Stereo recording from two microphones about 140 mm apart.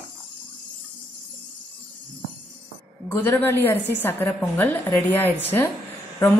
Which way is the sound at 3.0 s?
15° left (ahead or behind).